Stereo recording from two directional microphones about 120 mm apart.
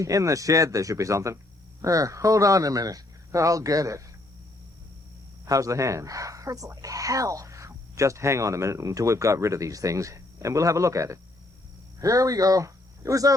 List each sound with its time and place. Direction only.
0.0 s speech: 25° right (ahead or behind)
5.5 s speech: 30° right (ahead or behind)